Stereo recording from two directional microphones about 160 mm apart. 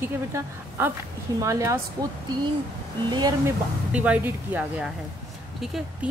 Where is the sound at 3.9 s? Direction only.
10° right (ahead or behind).